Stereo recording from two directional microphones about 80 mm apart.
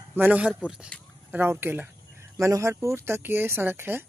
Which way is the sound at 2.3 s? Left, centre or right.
Right.